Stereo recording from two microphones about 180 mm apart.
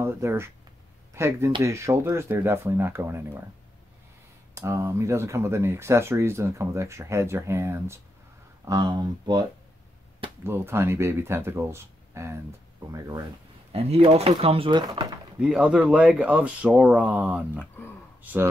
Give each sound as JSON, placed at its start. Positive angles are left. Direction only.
{"t": 0.0, "sound": "speech", "side_deg": -15}
{"t": 4.6, "sound": "speech", "side_deg": -15}
{"t": 10.4, "sound": "speech", "side_deg": -15}
{"t": 13.7, "sound": "speech", "side_deg": -35}
{"t": 15.4, "sound": "speech", "side_deg": -5}